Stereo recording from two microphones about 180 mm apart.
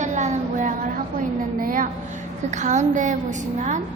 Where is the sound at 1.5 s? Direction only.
50° right (ahead or behind).